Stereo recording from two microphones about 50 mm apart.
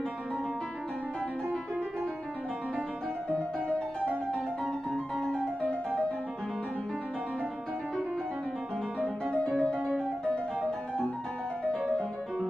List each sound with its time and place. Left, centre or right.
5.2 s music: centre
9.6 s music: centre